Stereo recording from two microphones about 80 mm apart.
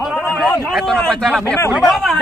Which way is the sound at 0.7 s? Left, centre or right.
Centre.